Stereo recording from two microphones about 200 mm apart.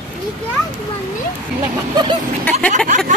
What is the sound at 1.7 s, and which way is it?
Speech, 20° right (ahead or behind).